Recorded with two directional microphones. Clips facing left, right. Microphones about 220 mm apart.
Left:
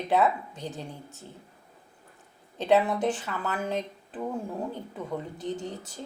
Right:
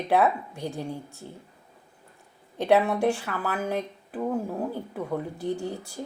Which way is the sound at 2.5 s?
15° right (ahead or behind).